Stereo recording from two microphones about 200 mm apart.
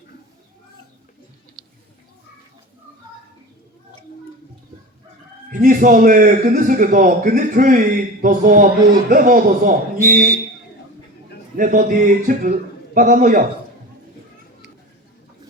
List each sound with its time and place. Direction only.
5.5 s a man's voice: 40° right (ahead or behind)
11.5 s a man's voice: 40° right (ahead or behind)